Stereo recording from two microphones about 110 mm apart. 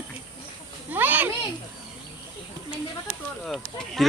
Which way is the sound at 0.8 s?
15° right (ahead or behind).